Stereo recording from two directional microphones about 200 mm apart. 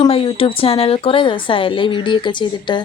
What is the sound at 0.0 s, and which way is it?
A woman's voice, 25° left (ahead or behind).